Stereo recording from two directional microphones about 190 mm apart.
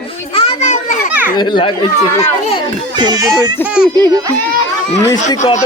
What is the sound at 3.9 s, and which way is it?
Speech, 20° right (ahead or behind).